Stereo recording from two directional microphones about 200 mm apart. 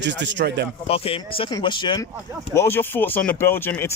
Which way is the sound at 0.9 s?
30° left (ahead or behind).